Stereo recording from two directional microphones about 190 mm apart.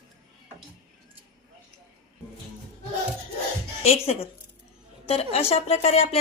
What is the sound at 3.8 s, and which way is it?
A woman's voice, 30° left (ahead or behind).